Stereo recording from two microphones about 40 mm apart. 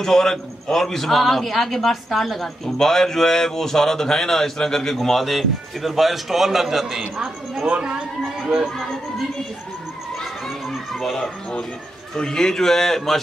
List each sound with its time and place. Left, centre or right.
0.0 s a man's voice: centre
7.6 s speech: right
10.9 s a man's voice: centre